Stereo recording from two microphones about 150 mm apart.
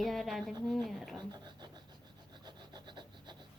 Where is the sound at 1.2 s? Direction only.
30° right (ahead or behind).